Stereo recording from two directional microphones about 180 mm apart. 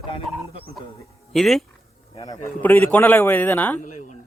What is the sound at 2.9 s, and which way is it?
Speech, 10° left (ahead or behind).